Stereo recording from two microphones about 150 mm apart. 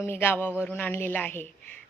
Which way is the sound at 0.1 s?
15° left (ahead or behind).